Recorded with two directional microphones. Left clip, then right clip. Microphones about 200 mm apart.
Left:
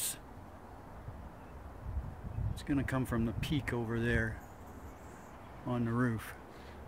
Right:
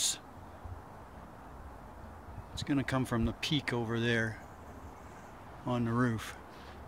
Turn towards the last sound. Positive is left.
turn(degrees=-15)  # may be behind; listen again after turning